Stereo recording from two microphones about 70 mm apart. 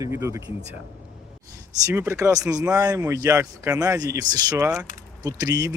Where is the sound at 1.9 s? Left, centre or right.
Right.